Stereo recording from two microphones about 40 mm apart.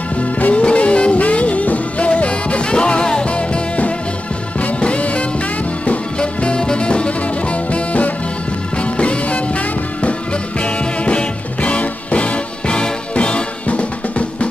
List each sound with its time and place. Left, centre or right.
0.2 s music: left
10.6 s music: left